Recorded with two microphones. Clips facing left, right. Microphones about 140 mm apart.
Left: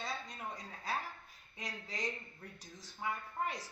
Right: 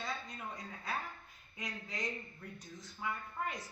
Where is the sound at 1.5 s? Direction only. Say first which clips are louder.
Right 1 dB; 35° left (ahead or behind).